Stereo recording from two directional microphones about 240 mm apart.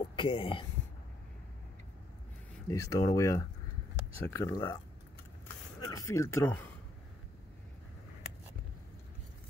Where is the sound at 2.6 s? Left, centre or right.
Centre.